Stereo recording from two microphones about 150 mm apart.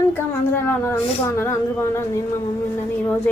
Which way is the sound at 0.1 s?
15° left (ahead or behind).